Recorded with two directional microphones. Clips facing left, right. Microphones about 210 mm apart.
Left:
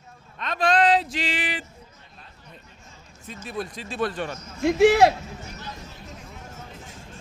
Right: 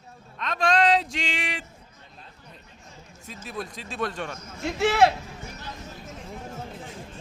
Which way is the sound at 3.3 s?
Centre (ahead or behind).